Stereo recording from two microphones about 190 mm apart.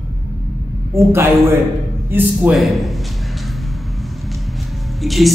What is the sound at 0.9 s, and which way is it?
Speech, 15° right (ahead or behind).